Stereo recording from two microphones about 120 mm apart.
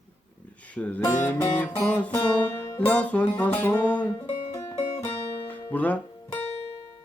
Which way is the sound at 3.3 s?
15° left (ahead or behind).